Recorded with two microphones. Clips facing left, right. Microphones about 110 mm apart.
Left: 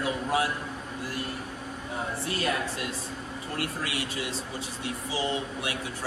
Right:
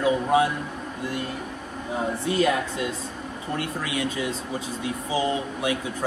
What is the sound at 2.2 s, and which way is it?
Speech, 25° right (ahead or behind).